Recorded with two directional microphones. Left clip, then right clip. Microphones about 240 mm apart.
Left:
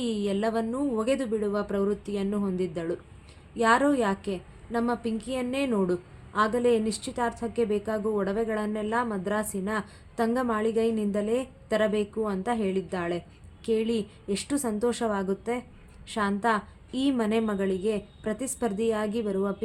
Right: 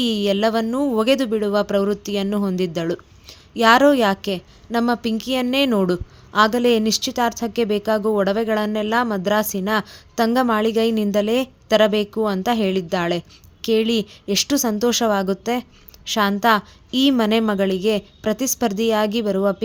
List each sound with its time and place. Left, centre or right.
0.0 s a woman's voice: right